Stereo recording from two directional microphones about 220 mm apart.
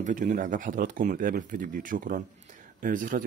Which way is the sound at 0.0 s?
35° right (ahead or behind).